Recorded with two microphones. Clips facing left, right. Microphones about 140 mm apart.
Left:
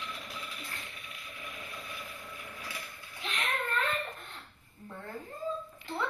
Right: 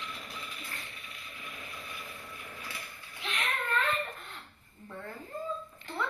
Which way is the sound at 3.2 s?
45° left (ahead or behind).